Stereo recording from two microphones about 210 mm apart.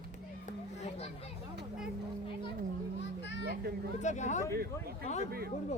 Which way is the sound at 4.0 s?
35° left (ahead or behind).